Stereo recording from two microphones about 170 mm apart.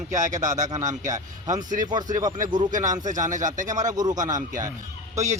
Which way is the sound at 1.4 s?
50° right (ahead or behind).